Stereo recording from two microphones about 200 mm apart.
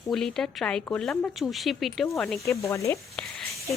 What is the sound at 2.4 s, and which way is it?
Speech, 15° left (ahead or behind).